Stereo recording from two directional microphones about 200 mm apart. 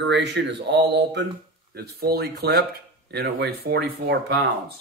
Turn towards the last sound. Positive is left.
turn(degrees=-55)  # may be behind; listen again after turning